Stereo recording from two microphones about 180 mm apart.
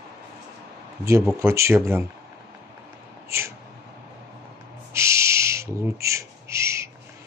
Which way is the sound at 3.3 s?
15° right (ahead or behind).